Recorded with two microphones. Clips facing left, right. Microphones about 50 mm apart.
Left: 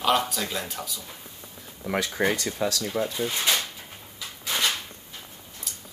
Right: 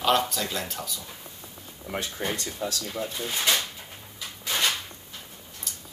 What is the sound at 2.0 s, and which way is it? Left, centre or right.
Speech, left.